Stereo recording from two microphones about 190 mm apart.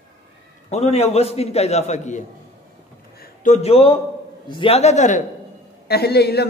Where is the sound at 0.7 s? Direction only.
35° left (ahead or behind).